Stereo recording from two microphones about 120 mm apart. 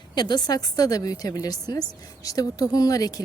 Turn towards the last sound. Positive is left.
turn(degrees=30)  # may be behind; listen again after turning